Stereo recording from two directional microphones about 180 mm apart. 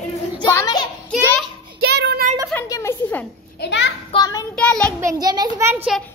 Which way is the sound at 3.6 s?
75° left (ahead or behind).